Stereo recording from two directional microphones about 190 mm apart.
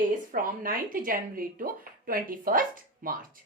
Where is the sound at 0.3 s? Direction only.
45° right (ahead or behind).